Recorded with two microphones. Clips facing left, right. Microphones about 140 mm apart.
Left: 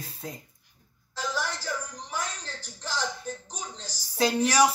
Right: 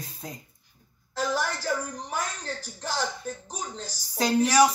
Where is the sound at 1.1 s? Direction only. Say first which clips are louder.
Right 4 dB; 55° right (ahead or behind).